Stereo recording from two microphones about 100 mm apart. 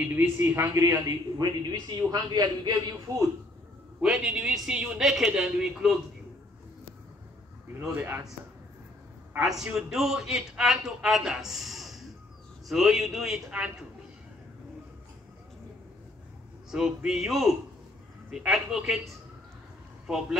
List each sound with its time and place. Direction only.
0.0 s a man's voice: 20° right (ahead or behind); by 3.3 s 40° right (ahead or behind)
4.0 s a man's voice: 5° right (ahead or behind)
7.9 s speech: 20° right (ahead or behind)
9.4 s a man's voice: 5° right (ahead or behind)
16.7 s a man's voice: 5° right (ahead or behind)